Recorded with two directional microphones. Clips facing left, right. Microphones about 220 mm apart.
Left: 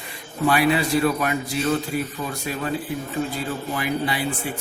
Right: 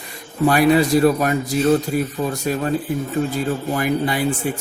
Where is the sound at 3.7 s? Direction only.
45° right (ahead or behind).